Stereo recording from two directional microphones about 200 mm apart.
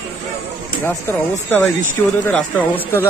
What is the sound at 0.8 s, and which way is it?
Speech, 10° left (ahead or behind).